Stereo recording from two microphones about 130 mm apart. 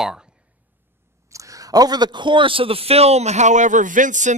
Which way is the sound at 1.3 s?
25° right (ahead or behind).